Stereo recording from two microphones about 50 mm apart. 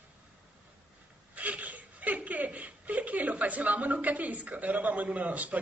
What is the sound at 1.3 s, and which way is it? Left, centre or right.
Speech, right.